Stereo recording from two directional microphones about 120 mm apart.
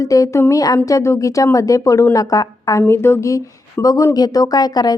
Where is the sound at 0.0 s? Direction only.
25° left (ahead or behind).